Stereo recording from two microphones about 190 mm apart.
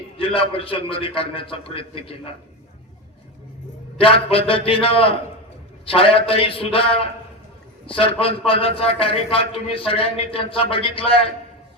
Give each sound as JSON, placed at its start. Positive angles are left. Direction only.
{"t": 0.2, "sound": "a man's voice", "side_deg": 30}
{"t": 3.9, "sound": "a man's voice", "side_deg": 30}